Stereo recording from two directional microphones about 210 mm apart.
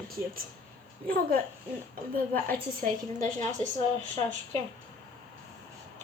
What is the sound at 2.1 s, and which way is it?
A woman's voice, 40° right (ahead or behind).